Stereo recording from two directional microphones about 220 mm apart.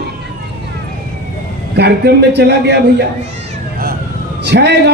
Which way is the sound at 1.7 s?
50° right (ahead or behind).